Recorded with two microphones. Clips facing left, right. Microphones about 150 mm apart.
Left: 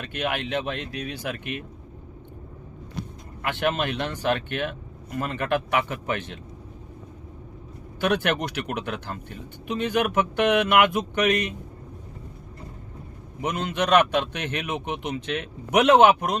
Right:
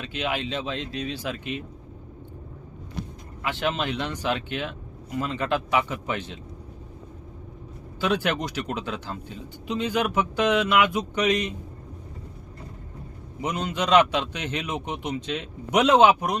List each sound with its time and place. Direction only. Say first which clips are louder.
0.0 s speech: even; 55° left (ahead or behind)
3.4 s speech: left 2 dB; 55° left (ahead or behind)
8.0 s speech: left 1 dB; 60° left (ahead or behind)
13.7 s speech: even; 55° left (ahead or behind)